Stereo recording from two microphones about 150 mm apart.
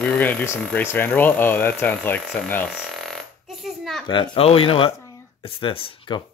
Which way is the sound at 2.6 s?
Centre (ahead or behind).